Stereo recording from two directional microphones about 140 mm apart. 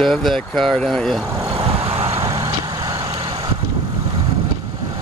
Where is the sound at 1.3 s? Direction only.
25° right (ahead or behind).